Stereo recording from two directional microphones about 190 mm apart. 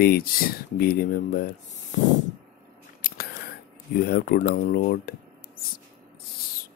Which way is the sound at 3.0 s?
55° left (ahead or behind).